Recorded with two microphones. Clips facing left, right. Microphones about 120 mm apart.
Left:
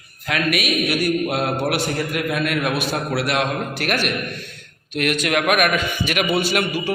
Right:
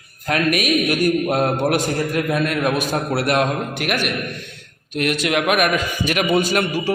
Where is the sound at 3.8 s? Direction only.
15° right (ahead or behind).